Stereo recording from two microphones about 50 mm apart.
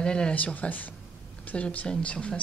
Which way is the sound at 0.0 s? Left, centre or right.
Centre.